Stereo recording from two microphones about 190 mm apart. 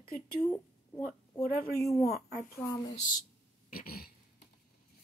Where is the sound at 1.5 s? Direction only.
50° left (ahead or behind).